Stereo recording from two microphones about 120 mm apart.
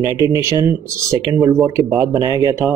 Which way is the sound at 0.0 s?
30° right (ahead or behind).